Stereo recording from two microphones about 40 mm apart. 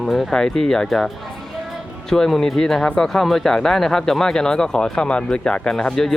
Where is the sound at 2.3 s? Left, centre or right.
Centre.